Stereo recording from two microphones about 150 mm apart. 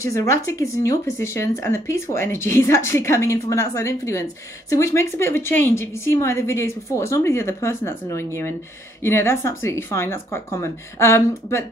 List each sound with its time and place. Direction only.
0.0 s a woman's voice: 20° left (ahead or behind)